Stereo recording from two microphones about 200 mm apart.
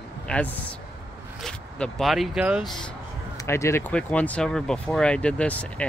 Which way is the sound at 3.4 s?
15° left (ahead or behind).